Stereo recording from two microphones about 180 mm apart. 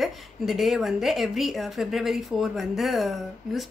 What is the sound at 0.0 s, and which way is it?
A woman's voice, centre (ahead or behind).